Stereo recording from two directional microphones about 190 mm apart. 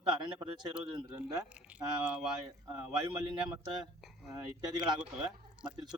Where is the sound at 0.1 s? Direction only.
25° right (ahead or behind).